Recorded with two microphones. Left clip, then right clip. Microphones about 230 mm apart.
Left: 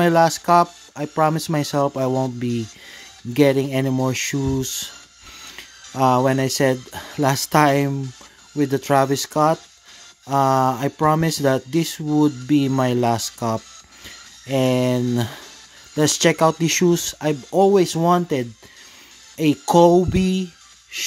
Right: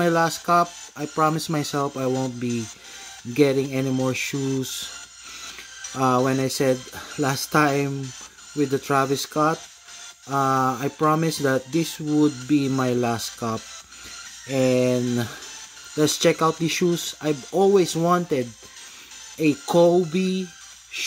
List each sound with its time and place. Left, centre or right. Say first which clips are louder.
0.0 s speech: left 5 dB; left